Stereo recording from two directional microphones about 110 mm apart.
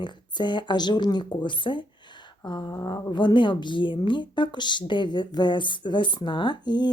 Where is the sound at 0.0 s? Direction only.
45° left (ahead or behind).